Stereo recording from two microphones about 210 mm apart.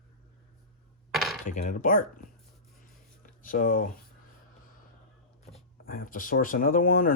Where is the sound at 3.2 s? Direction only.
40° left (ahead or behind).